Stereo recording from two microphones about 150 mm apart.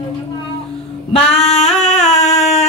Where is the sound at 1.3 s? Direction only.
45° left (ahead or behind).